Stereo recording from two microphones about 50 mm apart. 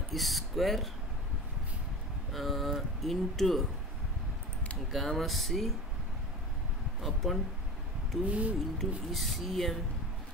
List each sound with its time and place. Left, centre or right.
0.1 s speech: centre
2.3 s speech: centre
4.9 s speech: centre
7.0 s speech: centre
8.3 s speech: right
8.7 s speech: centre